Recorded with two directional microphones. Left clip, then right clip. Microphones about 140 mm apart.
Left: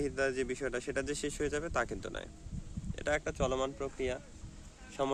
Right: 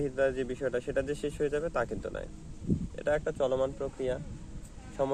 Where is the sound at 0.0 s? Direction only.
30° left (ahead or behind).